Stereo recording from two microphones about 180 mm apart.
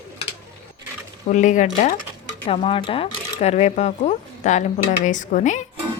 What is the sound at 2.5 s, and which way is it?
Speech, 30° left (ahead or behind).